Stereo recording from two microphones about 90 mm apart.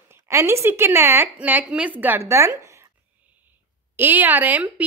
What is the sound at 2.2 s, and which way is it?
Speech, 30° right (ahead or behind).